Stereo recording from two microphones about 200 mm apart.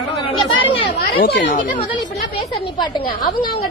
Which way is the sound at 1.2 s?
60° left (ahead or behind).